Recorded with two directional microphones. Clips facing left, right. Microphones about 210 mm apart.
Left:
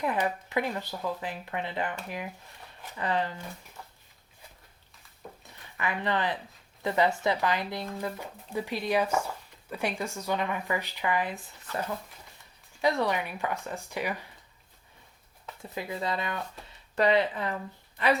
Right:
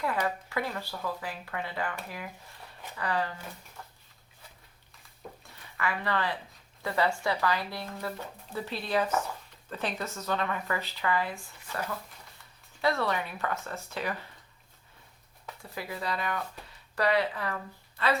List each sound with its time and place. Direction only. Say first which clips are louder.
0.0 s speech: left 2 dB; 20° left (ahead or behind)
3.8 s a sound: even; 5° left (ahead or behind)
5.7 s speech: left 1 dB; 20° left (ahead or behind)
12.8 s speech: left 2 dB; 15° left (ahead or behind)
15.7 s speech: left 3 dB; 20° left (ahead or behind)